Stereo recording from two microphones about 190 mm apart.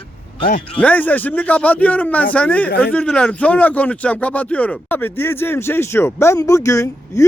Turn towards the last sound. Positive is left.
turn(degrees=15)  # may be behind; listen again after turning